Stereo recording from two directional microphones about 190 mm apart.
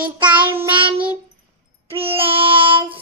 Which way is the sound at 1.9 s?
30° right (ahead or behind).